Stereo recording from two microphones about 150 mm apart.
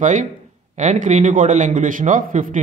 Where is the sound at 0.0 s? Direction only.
55° right (ahead or behind).